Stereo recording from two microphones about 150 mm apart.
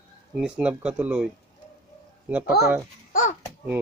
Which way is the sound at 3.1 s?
60° left (ahead or behind).